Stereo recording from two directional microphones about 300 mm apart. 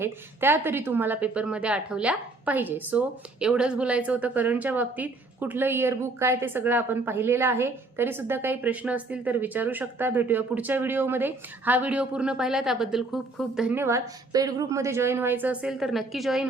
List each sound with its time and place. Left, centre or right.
0.0 s speech: centre